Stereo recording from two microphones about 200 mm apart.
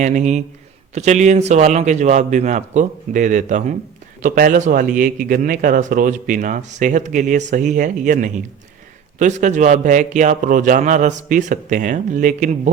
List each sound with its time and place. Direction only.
0.0 s speech: 35° right (ahead or behind)